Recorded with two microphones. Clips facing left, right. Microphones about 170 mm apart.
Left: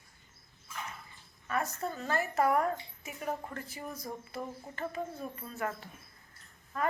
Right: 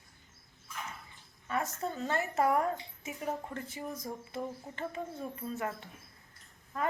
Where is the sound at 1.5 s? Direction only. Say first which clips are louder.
Even; 20° right (ahead or behind).